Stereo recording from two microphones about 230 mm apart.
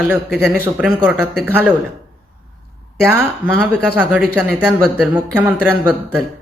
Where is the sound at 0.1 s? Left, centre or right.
Centre.